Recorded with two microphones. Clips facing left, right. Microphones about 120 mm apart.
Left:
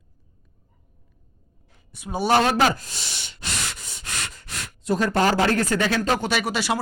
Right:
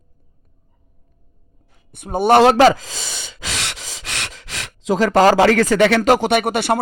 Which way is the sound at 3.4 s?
90° right.